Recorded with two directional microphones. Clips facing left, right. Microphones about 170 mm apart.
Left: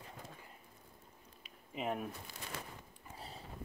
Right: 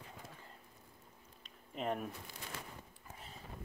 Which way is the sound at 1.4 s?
5° left (ahead or behind).